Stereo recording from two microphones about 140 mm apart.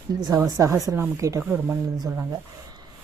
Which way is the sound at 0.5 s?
20° right (ahead or behind).